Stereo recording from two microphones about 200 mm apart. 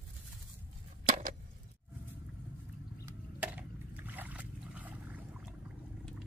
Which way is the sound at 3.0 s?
5° right (ahead or behind).